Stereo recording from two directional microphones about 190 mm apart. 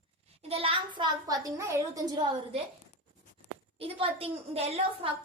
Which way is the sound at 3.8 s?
30° right (ahead or behind).